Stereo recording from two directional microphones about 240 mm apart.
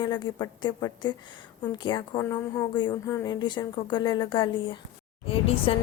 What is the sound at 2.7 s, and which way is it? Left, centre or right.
A woman's voice, centre.